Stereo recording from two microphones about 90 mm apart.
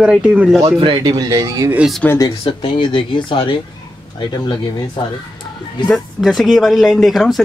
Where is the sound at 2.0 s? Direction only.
20° left (ahead or behind).